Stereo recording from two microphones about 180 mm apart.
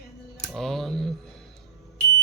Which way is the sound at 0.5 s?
Centre (ahead or behind).